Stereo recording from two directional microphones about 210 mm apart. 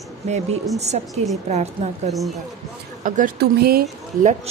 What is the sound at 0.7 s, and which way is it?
Speech, 30° right (ahead or behind).